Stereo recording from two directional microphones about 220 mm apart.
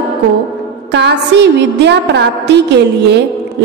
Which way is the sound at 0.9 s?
50° right (ahead or behind).